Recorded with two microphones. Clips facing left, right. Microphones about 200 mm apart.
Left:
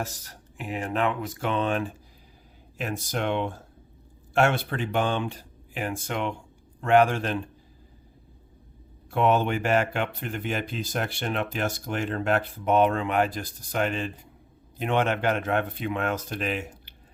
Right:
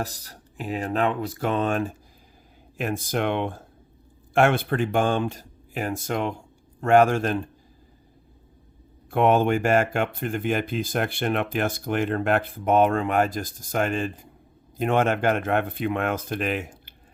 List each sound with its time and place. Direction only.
0.0 s speech: 35° right (ahead or behind)
9.0 s speech: 55° right (ahead or behind)